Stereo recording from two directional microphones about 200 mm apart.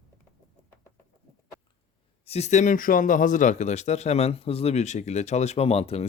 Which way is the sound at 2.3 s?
35° left (ahead or behind).